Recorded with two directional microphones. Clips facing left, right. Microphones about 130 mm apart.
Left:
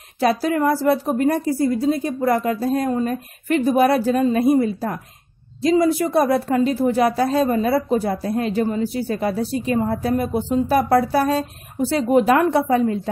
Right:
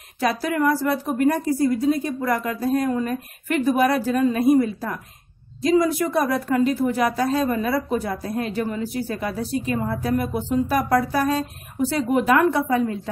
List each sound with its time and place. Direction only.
0.2 s a woman's voice: 30° left (ahead or behind)